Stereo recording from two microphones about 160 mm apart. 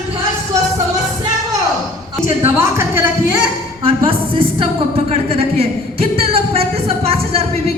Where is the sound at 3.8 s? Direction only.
35° right (ahead or behind).